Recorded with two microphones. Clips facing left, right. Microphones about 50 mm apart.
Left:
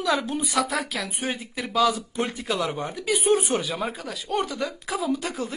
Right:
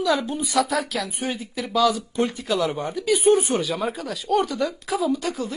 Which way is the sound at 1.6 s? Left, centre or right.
Centre.